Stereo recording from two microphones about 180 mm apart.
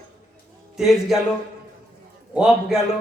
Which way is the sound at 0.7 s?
Centre (ahead or behind).